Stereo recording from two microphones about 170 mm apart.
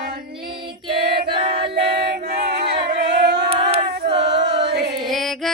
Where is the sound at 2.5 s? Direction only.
75° right (ahead or behind).